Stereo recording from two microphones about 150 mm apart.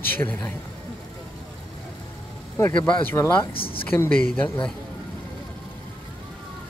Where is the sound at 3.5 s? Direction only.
35° left (ahead or behind).